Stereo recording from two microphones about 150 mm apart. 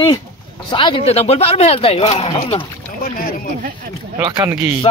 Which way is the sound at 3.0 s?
70° left (ahead or behind).